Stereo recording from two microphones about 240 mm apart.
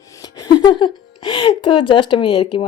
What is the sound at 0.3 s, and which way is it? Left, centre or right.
Speech, centre.